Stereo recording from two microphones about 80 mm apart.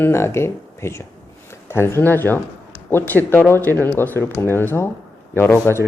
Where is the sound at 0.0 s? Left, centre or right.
Left.